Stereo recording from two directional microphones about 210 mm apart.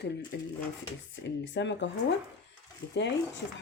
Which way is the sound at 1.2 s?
60° left (ahead or behind).